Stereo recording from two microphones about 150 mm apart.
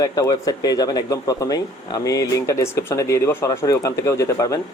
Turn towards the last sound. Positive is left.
turn(degrees=20)  # may be behind; listen again after turning